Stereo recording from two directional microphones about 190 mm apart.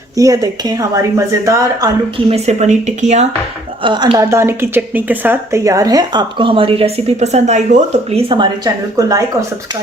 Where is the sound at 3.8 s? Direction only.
25° right (ahead or behind).